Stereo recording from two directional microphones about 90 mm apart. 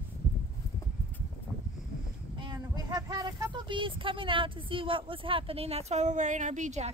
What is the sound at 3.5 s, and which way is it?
Speech, 65° right (ahead or behind).